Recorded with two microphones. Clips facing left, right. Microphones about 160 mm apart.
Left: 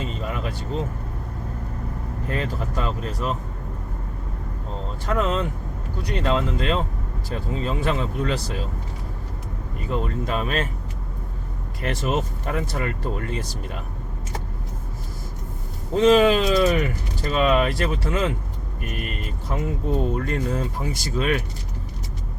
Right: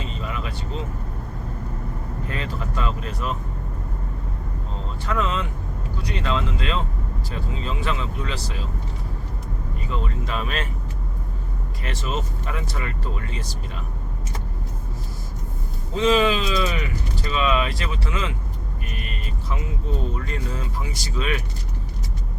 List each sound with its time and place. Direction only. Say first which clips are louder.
0.0 s vehicle: left 2 dB; 45° left (ahead or behind)
2.3 s speech: left 4 dB; 40° left (ahead or behind)
5.0 s speech: left 2 dB; 45° left (ahead or behind)
9.9 s speech: left 4 dB; 45° left (ahead or behind)
11.8 s speech: left 5 dB; 55° left (ahead or behind)
16.0 s speech: left 4 dB; 50° left (ahead or behind)